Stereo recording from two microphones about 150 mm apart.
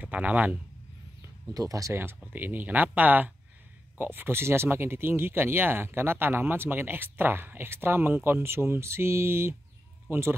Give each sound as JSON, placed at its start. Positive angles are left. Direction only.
{"t": 0.0, "sound": "a man's voice", "side_deg": -10}
{"t": 1.5, "sound": "speech", "side_deg": -25}